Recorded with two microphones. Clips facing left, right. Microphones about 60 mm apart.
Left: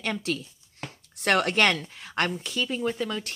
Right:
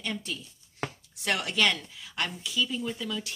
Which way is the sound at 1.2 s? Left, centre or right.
Left.